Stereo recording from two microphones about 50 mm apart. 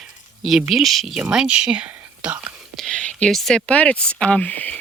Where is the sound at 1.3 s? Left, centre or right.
Right.